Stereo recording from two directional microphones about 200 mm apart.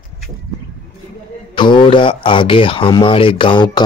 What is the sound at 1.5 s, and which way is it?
Speech, 25° left (ahead or behind).